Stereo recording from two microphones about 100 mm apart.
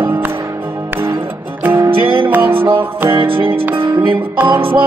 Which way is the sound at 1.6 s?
20° right (ahead or behind).